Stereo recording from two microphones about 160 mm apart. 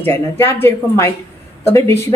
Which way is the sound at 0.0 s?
15° left (ahead or behind).